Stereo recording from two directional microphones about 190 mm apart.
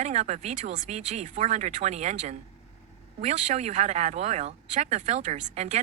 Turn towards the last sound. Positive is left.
turn(degrees=-40)  # may be behind; listen again after turning